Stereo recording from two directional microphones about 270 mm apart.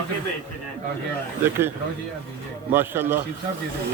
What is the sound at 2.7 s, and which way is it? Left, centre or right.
Speech, centre.